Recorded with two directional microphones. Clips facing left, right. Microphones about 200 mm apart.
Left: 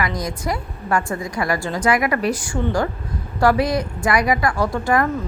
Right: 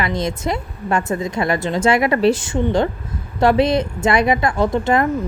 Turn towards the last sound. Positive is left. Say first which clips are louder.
# right 3 dB
turn(degrees=-20)  # may be behind; listen again after turning